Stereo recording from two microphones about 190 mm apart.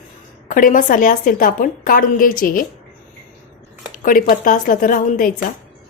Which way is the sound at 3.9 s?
45° left (ahead or behind).